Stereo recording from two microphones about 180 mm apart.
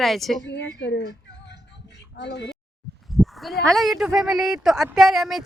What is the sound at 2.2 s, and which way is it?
Speech, 75° left (ahead or behind).